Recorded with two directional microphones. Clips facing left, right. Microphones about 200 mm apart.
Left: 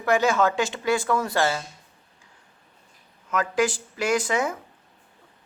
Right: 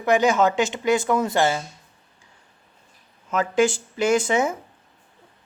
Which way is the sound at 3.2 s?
25° right (ahead or behind).